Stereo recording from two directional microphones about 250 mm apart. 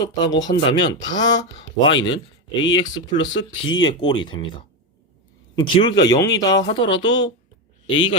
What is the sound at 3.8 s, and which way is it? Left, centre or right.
Speech, centre.